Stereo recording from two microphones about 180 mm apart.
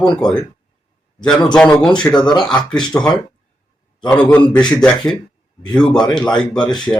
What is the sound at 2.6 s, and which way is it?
Speech, 25° left (ahead or behind).